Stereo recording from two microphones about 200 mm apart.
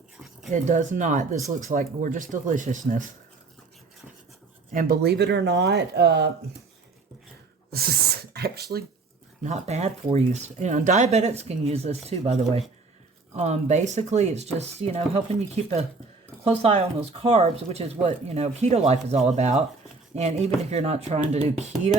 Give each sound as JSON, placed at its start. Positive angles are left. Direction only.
{"t": 0.5, "sound": "speech", "side_deg": -40}
{"t": 4.7, "sound": "speech", "side_deg": -45}
{"t": 7.7, "sound": "speech", "side_deg": -50}
{"t": 9.4, "sound": "speech", "side_deg": -35}